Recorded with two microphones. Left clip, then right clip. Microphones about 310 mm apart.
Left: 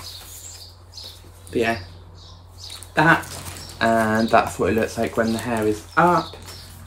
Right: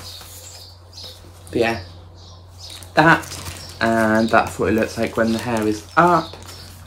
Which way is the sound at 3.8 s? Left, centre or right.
Centre.